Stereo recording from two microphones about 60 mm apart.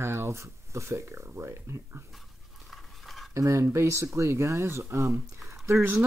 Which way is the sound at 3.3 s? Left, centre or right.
Right.